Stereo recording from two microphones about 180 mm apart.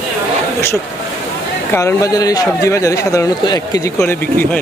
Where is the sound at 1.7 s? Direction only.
15° left (ahead or behind).